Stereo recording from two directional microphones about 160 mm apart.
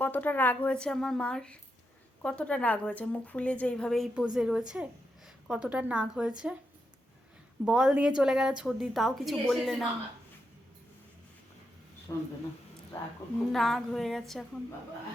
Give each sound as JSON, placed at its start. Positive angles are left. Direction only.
{"t": 0.0, "sound": "a woman's voice", "side_deg": 10}
{"t": 7.6, "sound": "a woman's voice", "side_deg": -5}
{"t": 12.1, "sound": "speech", "side_deg": 20}
{"t": 13.5, "sound": "a woman's voice", "side_deg": 0}